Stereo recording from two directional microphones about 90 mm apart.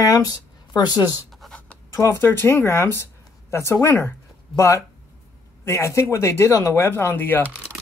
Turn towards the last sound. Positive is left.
turn(degrees=20)  # may be behind; listen again after turning